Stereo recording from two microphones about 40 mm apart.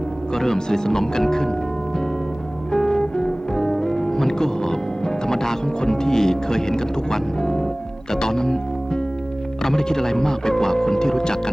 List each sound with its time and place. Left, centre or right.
0.3 s speech: centre
2.7 s music: centre
8.1 s speech: centre
9.6 s speech: centre